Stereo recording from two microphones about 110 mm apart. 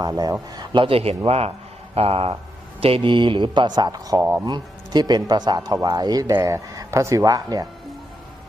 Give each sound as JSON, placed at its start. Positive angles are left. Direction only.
{"t": 0.5, "sound": "a man's voice", "side_deg": -40}
{"t": 4.2, "sound": "speech", "side_deg": -20}
{"t": 4.4, "sound": "speech", "side_deg": -40}